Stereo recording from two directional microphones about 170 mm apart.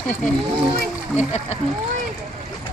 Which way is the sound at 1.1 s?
40° left (ahead or behind).